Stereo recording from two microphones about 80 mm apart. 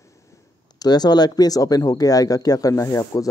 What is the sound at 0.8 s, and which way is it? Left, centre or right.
Speech, left.